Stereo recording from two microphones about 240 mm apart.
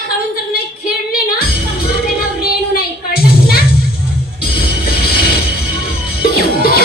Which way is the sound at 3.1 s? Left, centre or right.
Left.